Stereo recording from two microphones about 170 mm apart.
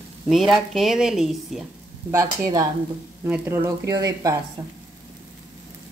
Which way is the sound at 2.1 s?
20° right (ahead or behind).